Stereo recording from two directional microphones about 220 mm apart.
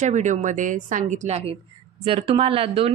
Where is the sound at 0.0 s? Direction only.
35° right (ahead or behind).